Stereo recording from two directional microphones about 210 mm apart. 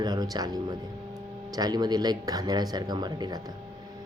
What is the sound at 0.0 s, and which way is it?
Speech, 20° right (ahead or behind).